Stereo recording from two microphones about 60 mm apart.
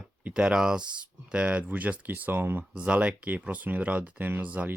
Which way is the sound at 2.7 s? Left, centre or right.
Right.